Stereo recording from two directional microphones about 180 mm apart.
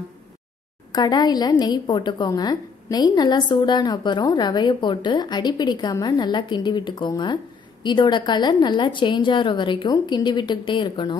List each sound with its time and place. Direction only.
0.9 s a woman's voice: 20° left (ahead or behind)